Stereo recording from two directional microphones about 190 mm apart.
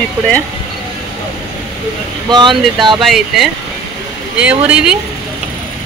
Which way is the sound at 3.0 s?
Centre (ahead or behind).